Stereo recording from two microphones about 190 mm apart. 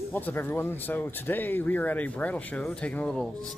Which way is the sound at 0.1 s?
10° left (ahead or behind).